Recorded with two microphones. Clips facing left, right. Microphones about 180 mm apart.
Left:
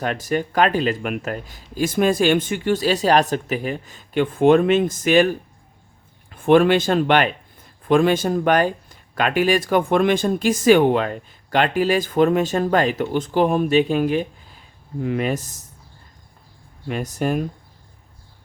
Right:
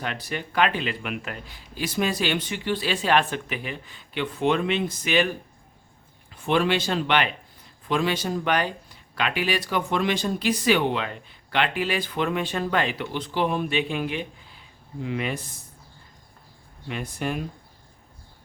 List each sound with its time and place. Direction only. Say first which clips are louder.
0.0 s speech: left 9 dB; 45° left (ahead or behind)
6.3 s speech: left 8 dB; 50° left (ahead or behind)
16.9 s speech: left 7 dB; 40° left (ahead or behind)